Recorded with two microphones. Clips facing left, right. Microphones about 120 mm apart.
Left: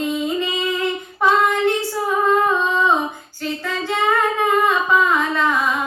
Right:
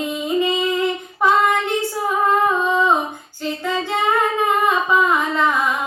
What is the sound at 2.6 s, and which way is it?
Humming, 15° right (ahead or behind).